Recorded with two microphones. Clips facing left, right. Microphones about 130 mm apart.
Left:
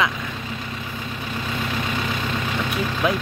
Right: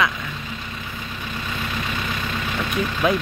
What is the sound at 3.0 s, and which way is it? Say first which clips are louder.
Speech: right 2 dB; 5° left (ahead or behind).